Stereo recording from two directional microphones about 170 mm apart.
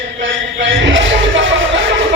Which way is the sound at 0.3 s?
90° right.